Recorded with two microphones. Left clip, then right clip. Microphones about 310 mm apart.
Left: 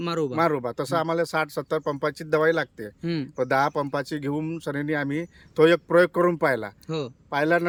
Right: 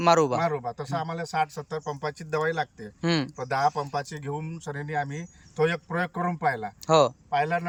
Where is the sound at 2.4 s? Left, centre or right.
Left.